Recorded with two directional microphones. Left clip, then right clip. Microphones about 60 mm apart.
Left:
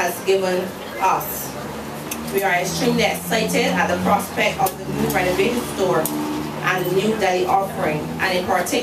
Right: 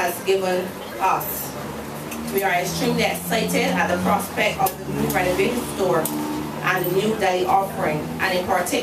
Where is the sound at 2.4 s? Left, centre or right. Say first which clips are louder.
Left 2 dB; centre.